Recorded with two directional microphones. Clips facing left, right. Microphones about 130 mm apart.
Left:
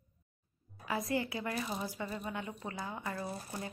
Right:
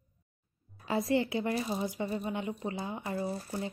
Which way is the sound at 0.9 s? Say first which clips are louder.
Right 6 dB; 25° right (ahead or behind).